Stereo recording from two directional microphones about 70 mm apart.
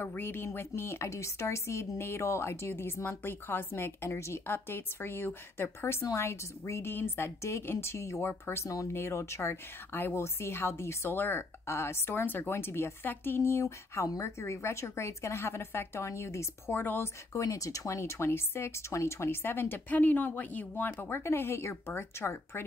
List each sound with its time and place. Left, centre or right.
0.0 s a woman's voice: left
8.3 s a woman's voice: left
8.6 s speech: left
8.9 s a woman's voice: left
16.7 s a woman's voice: left
17.3 s a woman's voice: left